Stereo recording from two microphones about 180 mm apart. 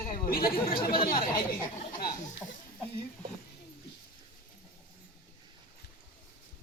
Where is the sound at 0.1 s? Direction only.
55° left (ahead or behind).